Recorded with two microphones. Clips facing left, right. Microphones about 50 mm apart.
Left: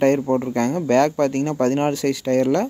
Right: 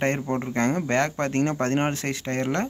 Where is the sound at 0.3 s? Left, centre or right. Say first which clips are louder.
Left 7 dB; centre.